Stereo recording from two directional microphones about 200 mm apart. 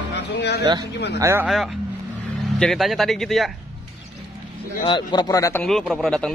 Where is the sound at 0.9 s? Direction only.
55° left (ahead or behind).